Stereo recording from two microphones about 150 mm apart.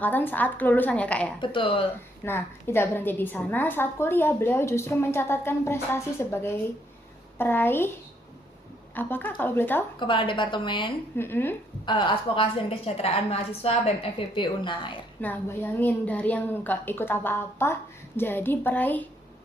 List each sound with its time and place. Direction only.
0.0 s a woman's voice: 15° left (ahead or behind)
1.4 s a woman's voice: 35° left (ahead or behind)
2.2 s a woman's voice: 15° left (ahead or behind)
9.0 s a woman's voice: 15° left (ahead or behind)
10.0 s a woman's voice: 35° left (ahead or behind)
11.2 s a woman's voice: 15° left (ahead or behind)
11.9 s a woman's voice: 35° left (ahead or behind)
15.2 s a woman's voice: 15° left (ahead or behind)